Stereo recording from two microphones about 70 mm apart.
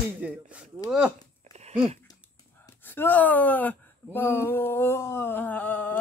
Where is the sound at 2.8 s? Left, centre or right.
Left.